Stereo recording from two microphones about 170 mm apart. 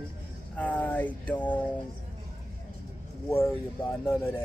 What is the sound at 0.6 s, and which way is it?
Speech, 10° left (ahead or behind).